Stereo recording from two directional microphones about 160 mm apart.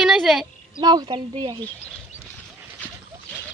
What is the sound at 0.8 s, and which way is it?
Speech, 25° right (ahead or behind).